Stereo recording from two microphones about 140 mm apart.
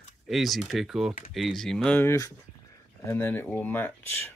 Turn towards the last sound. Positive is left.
turn(degrees=15)  # may be behind; listen again after turning